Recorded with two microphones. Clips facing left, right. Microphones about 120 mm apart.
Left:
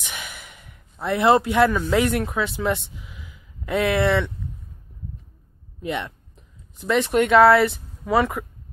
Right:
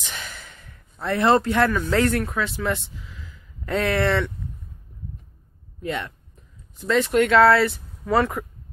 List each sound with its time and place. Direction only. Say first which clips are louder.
0.0 s speech: even; 10° left (ahead or behind)
5.8 s a sound: left 1 dB; 20° left (ahead or behind)
8.1 s speech: even; 5° left (ahead or behind)